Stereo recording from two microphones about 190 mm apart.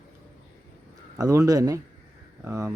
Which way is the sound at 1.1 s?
15° right (ahead or behind).